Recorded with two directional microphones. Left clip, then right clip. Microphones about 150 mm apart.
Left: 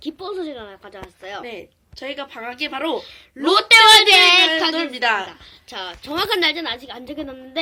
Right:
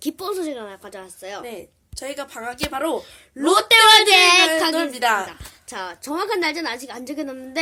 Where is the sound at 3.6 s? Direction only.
35° right (ahead or behind).